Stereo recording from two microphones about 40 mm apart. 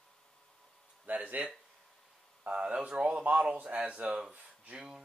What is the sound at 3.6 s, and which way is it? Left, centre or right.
Speech, right.